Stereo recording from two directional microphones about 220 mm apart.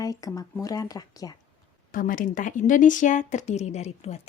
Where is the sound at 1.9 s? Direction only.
35° left (ahead or behind).